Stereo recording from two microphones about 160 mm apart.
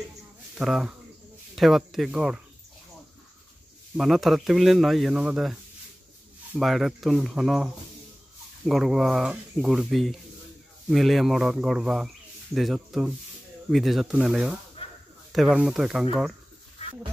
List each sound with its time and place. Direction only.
0.6 s speech: 5° right (ahead or behind)
3.9 s speech: centre (ahead or behind)
6.6 s speech: centre (ahead or behind)
14.8 s a sound: 35° left (ahead or behind)
15.3 s speech: 5° right (ahead or behind)